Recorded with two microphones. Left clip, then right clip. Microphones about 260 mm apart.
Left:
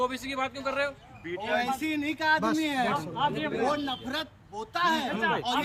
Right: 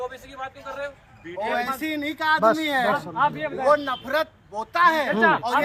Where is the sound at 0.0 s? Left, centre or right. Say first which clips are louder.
Left 3 dB; left.